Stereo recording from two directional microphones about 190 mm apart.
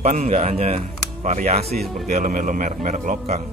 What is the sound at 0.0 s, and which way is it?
Speech, 40° right (ahead or behind).